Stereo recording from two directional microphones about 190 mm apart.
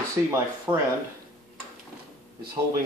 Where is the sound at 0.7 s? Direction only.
15° right (ahead or behind).